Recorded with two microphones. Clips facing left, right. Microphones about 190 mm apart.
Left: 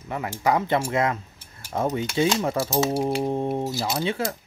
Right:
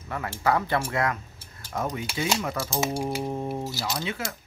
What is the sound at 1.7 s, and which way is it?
Speech, 30° left (ahead or behind).